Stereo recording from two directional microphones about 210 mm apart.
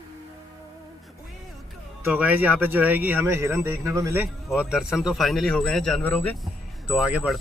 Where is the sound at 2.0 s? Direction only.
5° right (ahead or behind).